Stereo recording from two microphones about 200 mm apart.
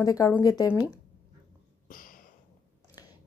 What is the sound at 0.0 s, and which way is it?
Speech, 15° left (ahead or behind).